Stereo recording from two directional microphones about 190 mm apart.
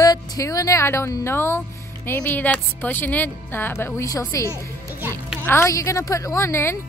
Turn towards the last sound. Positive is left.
turn(degrees=15)  # may be behind; listen again after turning